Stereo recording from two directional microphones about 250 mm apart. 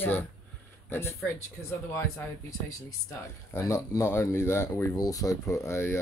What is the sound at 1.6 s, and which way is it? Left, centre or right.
Speech, centre.